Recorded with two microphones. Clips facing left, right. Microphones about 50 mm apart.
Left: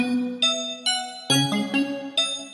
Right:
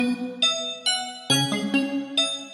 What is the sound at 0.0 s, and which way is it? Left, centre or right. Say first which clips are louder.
Music: left 1 dB; centre.